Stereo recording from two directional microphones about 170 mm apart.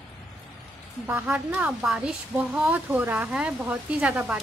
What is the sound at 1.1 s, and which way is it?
Speech, 10° right (ahead or behind).